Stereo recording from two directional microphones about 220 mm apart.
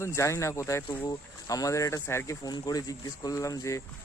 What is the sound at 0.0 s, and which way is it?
Speech, 10° left (ahead or behind).